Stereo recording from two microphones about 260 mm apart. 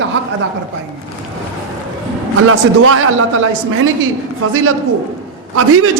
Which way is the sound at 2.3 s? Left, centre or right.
Right.